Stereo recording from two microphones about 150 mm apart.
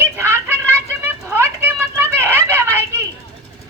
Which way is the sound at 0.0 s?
15° right (ahead or behind).